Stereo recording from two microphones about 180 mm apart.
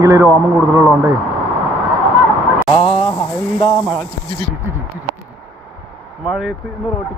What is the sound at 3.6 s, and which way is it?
Speech, 5° right (ahead or behind).